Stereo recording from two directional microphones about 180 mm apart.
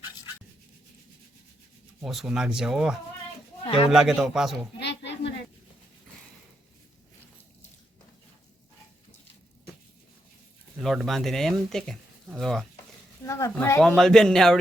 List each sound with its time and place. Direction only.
2.0 s speech: centre (ahead or behind)
4.8 s a sound: 75° left (ahead or behind)
10.8 s speech: centre (ahead or behind)
13.2 s speech: 15° left (ahead or behind)
13.7 s speech: centre (ahead or behind)